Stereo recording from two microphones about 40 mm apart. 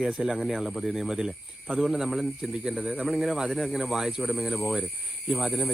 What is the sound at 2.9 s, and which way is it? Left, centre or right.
Speech, right.